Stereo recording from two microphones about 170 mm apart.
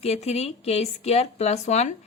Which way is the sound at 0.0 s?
40° left (ahead or behind).